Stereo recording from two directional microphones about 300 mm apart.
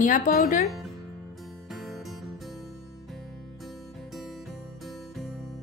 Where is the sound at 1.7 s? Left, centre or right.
Centre.